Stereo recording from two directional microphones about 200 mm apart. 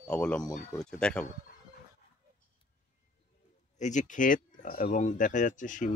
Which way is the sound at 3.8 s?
35° left (ahead or behind).